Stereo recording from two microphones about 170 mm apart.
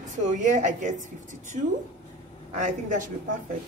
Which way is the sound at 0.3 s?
45° right (ahead or behind).